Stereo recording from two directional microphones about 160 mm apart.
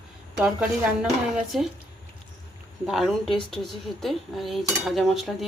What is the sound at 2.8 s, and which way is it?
Dishes, centre (ahead or behind).